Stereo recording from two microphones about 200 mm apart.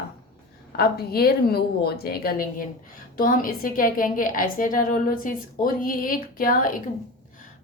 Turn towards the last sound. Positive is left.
turn(degrees=45)  # may be behind; listen again after turning